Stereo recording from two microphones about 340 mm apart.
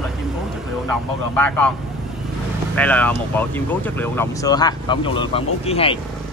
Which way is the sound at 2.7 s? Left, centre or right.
Centre.